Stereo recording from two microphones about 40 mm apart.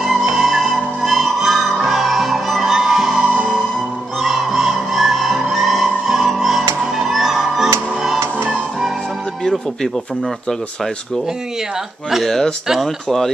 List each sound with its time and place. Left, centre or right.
0.0 s music: centre
3.2 s music: right
4.2 s music: centre
12.2 s speech: centre